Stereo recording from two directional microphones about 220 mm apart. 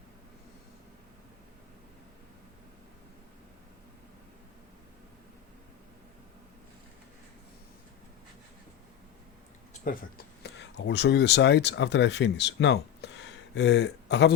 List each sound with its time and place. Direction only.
10.4 s speech: 50° left (ahead or behind)